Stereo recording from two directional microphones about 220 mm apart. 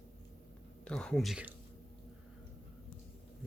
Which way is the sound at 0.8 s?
5° left (ahead or behind).